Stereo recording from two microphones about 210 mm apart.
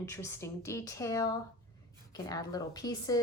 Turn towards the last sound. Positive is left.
turn(degrees=15)  # may be behind; listen again after turning